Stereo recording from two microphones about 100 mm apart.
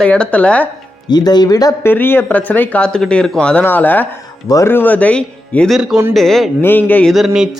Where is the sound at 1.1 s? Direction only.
45° left (ahead or behind).